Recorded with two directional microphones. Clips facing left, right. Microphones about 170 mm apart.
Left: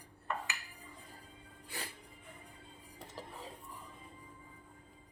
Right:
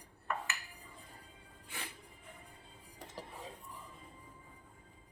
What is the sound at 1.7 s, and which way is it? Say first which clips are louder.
Music: left 2 dB; 35° left (ahead or behind).